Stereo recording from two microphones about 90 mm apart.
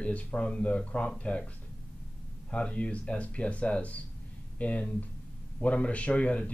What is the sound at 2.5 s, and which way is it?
Speech, 15° left (ahead or behind).